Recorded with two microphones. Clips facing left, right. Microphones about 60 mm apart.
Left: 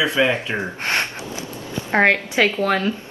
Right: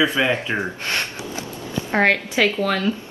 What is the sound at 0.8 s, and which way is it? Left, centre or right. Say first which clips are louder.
A woman's voice: left 3 dB; left.